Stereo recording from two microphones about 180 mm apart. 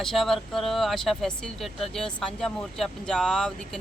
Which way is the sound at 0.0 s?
Centre (ahead or behind).